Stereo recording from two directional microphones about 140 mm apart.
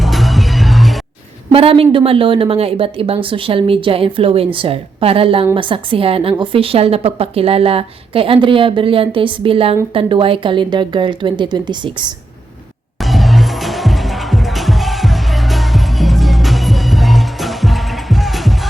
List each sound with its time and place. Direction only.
0.0 s music: centre (ahead or behind)
1.5 s a woman's voice: 40° right (ahead or behind)
13.0 s music: centre (ahead or behind)